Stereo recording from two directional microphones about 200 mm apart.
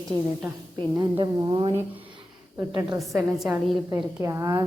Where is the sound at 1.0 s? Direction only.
20° right (ahead or behind).